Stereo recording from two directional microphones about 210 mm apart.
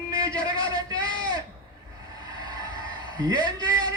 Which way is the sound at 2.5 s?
20° right (ahead or behind).